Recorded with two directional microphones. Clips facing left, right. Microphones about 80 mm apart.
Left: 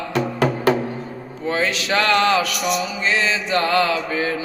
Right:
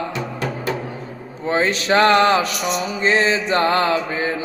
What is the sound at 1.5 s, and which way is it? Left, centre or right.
Mantra, right.